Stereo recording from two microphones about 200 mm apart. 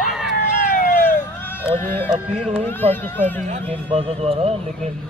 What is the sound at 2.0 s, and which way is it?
Speech, 5° right (ahead or behind).